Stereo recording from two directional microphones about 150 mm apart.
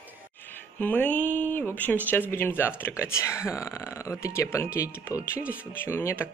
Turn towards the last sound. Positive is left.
turn(degrees=20)  # may be behind; listen again after turning